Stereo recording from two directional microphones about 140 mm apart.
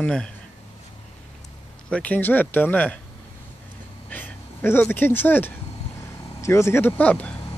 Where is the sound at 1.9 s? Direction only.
10° left (ahead or behind).